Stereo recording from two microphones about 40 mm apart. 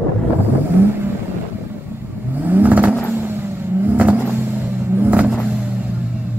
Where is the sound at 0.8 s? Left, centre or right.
Right.